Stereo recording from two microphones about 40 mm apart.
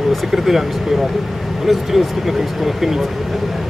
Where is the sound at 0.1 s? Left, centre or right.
Centre.